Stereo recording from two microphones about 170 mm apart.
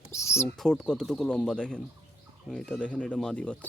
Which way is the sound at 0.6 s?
5° left (ahead or behind).